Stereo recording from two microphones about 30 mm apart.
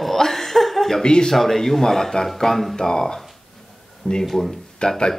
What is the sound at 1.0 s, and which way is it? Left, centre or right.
Speech, left.